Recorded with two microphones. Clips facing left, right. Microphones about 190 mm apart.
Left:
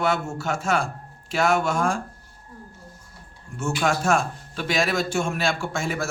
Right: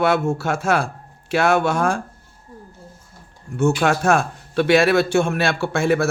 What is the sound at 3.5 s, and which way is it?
A man's voice, 65° right (ahead or behind).